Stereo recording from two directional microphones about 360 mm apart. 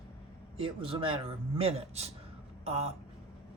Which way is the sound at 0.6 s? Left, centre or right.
Centre.